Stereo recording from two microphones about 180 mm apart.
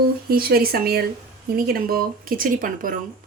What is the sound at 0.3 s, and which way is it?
Speech, 55° right (ahead or behind).